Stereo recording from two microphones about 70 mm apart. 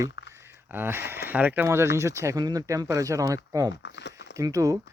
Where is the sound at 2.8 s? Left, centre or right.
Right.